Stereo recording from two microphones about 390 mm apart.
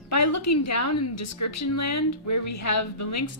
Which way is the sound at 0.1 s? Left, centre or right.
Left.